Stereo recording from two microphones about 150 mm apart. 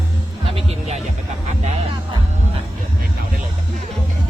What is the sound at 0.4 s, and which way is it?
Music, 40° right (ahead or behind).